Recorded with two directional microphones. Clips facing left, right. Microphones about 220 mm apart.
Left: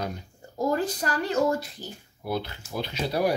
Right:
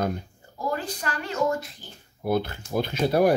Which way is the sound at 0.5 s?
40° left (ahead or behind).